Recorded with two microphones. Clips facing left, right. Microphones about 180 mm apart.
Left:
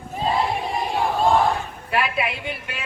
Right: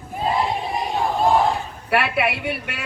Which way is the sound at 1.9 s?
70° right (ahead or behind).